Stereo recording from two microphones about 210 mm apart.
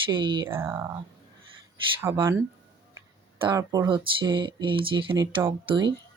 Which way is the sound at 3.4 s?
15° right (ahead or behind).